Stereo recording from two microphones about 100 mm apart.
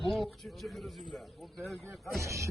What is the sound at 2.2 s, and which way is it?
Speech, 30° right (ahead or behind).